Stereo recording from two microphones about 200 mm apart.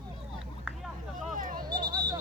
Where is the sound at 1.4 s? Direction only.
45° right (ahead or behind).